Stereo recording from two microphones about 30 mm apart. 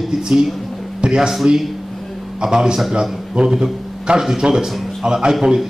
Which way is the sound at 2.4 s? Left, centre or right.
Right.